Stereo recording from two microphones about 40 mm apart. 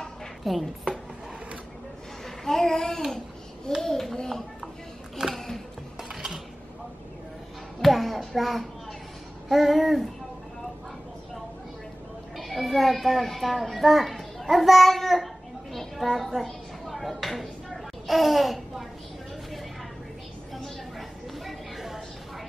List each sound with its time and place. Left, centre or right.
0.4 s a woman's voice: centre
2.2 s a child's voice: centre
5.3 s music: centre
6.0 s dishes: centre
7.8 s a sound: centre
8.4 s babbling: centre
12.4 s a child's voice: centre
15.7 s a sound: centre
21.5 s a sound: centre